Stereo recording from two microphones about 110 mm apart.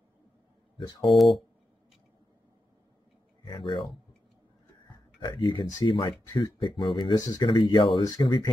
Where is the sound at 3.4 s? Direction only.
50° left (ahead or behind).